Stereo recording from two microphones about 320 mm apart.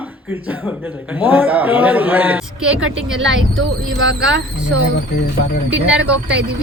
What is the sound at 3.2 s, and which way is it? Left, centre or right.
Speech, right.